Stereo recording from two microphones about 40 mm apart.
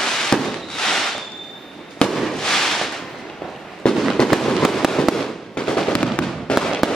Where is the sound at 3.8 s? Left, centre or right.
Centre.